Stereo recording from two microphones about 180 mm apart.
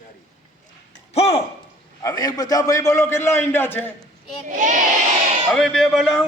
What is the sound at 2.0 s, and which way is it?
A man's voice, 20° left (ahead or behind).